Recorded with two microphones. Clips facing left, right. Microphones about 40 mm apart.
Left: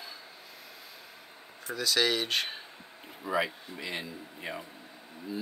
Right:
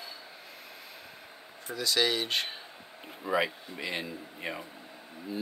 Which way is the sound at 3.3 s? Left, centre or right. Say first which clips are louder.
Right 1 dB; right.